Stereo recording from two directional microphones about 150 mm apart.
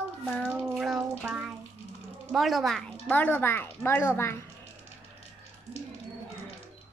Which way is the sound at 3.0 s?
10° left (ahead or behind).